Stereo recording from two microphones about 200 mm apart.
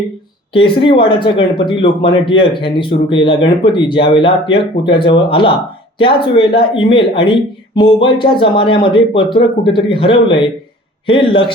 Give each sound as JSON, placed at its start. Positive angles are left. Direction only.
{"t": 0.5, "sound": "speech", "side_deg": 25}